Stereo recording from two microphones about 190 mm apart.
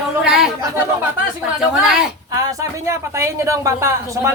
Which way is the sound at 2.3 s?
15° right (ahead or behind).